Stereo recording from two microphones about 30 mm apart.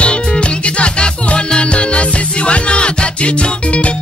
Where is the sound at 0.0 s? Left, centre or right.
Left.